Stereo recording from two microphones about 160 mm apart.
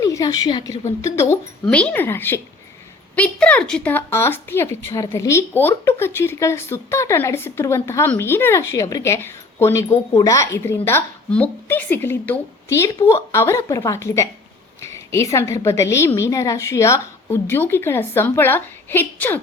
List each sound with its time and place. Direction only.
0.0 s a woman's voice: 20° left (ahead or behind)